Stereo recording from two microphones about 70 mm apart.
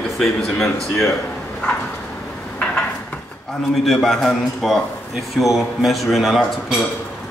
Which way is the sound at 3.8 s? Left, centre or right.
Centre.